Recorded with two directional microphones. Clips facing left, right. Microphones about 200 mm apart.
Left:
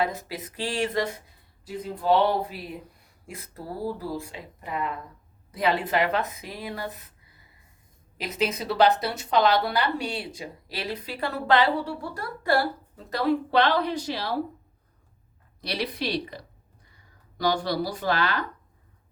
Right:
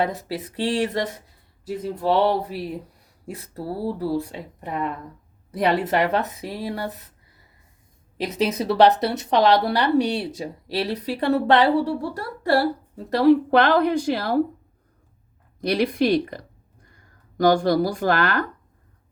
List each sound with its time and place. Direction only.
0.1 s a woman's voice: 35° right (ahead or behind)
2.0 s a woman's voice: 35° right (ahead or behind)
8.2 s a woman's voice: 35° right (ahead or behind)
13.5 s a woman's voice: 50° right (ahead or behind)
15.6 s a woman's voice: 50° right (ahead or behind)